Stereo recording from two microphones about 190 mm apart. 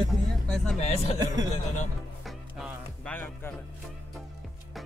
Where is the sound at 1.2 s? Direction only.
20° right (ahead or behind).